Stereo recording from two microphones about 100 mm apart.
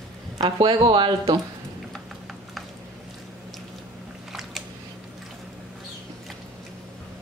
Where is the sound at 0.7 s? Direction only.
55° right (ahead or behind).